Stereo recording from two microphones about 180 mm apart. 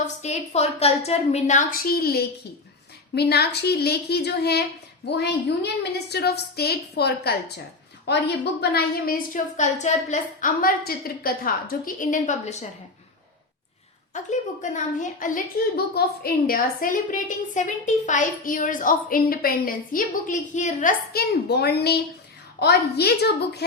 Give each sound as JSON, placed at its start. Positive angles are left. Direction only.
{"t": 0.2, "sound": "a woman's voice", "side_deg": 35}
{"t": 14.1, "sound": "a woman's voice", "side_deg": 40}
{"t": 15.7, "sound": "a woman's voice", "side_deg": 60}
{"t": 21.1, "sound": "a woman's voice", "side_deg": 60}